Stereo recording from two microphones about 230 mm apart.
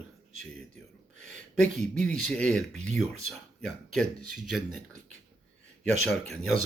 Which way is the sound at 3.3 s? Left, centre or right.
Centre.